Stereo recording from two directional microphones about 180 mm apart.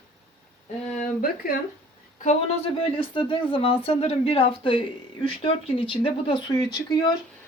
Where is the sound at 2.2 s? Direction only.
35° left (ahead or behind).